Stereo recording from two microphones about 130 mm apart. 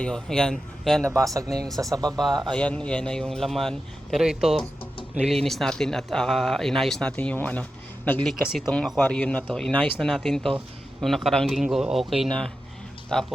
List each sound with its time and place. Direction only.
0.0 s speech: 5° left (ahead or behind)
1.0 s speech: 25° right (ahead or behind)
2.0 s speech: centre (ahead or behind)